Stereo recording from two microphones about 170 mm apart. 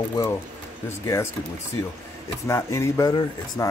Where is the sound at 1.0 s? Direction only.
15° left (ahead or behind).